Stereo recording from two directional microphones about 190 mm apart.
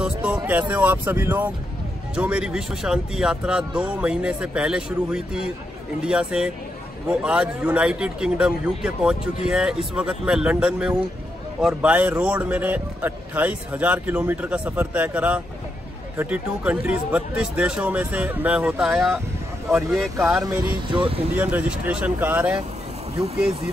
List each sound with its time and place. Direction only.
0.0 s a man's voice: 5° right (ahead or behind)
20.9 s speech: 25° right (ahead or behind)
21.4 s a man's voice: 10° right (ahead or behind)